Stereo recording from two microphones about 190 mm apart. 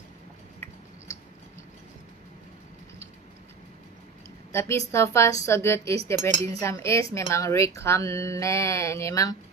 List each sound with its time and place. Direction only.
4.5 s a woman's voice: 15° left (ahead or behind)